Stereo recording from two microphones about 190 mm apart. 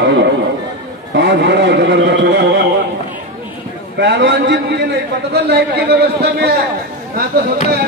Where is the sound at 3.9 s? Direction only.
65° right (ahead or behind).